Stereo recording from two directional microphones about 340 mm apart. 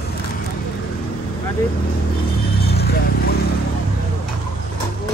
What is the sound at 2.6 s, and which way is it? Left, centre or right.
Vehicle, left.